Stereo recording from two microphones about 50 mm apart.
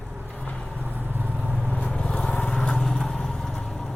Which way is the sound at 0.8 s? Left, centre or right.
Right.